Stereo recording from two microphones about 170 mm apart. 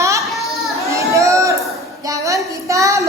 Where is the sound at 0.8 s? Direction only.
15° right (ahead or behind).